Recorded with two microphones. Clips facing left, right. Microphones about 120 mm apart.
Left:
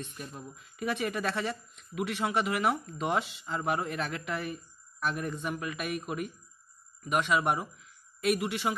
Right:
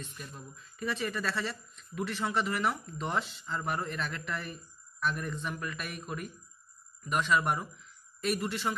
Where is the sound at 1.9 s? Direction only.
15° left (ahead or behind).